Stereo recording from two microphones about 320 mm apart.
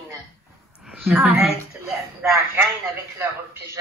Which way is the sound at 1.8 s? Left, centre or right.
Centre.